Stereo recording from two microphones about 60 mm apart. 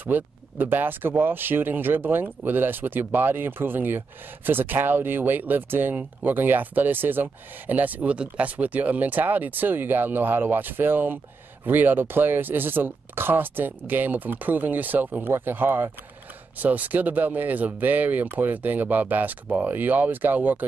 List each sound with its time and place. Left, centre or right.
0.0 s speech: right